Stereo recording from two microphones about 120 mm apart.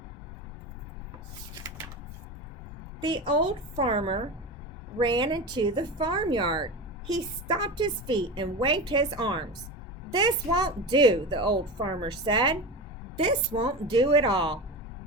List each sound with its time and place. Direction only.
3.0 s a woman's voice: 40° right (ahead or behind)
4.9 s a woman's voice: 35° right (ahead or behind)